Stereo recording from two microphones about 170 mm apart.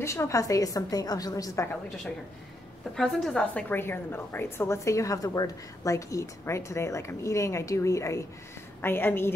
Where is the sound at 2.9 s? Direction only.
5° left (ahead or behind).